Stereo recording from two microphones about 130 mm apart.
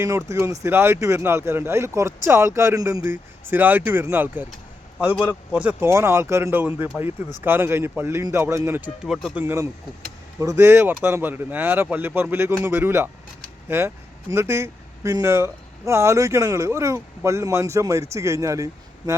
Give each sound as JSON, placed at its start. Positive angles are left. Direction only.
{"t": 0.0, "sound": "speech", "side_deg": -20}
{"t": 5.5, "sound": "speech", "side_deg": -15}
{"t": 9.0, "sound": "speech", "side_deg": 0}
{"t": 9.3, "sound": "speech", "side_deg": -15}